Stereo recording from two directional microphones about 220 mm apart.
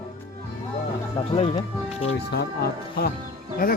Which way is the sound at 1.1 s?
30° left (ahead or behind).